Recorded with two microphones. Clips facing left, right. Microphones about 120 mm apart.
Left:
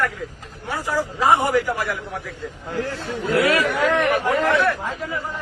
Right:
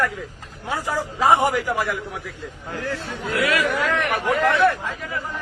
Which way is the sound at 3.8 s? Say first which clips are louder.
Left 3 dB; 20° left (ahead or behind).